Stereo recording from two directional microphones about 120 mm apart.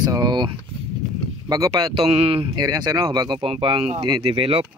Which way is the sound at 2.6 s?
35° right (ahead or behind).